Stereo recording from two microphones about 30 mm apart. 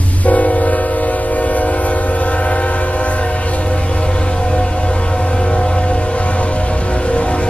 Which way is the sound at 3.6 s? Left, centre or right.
Left.